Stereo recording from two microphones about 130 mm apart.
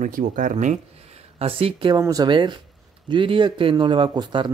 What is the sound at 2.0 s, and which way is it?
Speech, 30° right (ahead or behind).